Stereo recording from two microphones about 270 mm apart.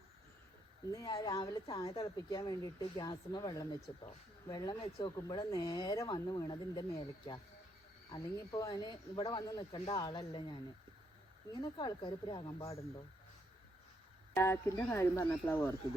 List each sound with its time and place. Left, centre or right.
0.9 s speech: centre
14.3 s speech: centre